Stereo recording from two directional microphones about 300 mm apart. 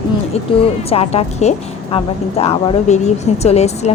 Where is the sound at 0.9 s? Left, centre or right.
Centre.